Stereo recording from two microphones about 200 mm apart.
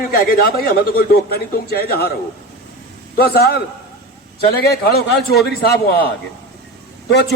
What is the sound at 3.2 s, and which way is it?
Speech, 50° left (ahead or behind).